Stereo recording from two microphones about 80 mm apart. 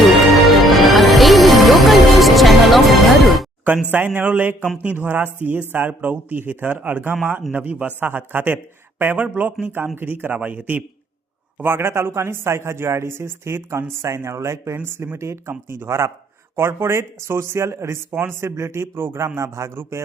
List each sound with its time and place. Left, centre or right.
0.0 s music: centre
3.9 s speech: right